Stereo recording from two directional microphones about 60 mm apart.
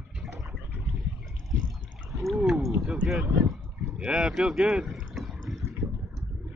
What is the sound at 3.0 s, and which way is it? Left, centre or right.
Speech, centre.